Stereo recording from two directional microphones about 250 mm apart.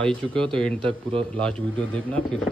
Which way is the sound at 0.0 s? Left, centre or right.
Centre.